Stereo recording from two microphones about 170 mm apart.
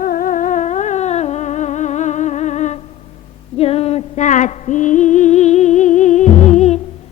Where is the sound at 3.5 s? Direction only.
35° left (ahead or behind).